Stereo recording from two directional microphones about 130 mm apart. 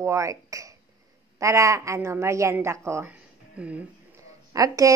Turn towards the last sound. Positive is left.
turn(degrees=-25)  # may be behind; listen again after turning